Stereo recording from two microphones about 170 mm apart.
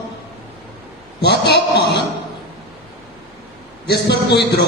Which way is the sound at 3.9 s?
75° left (ahead or behind).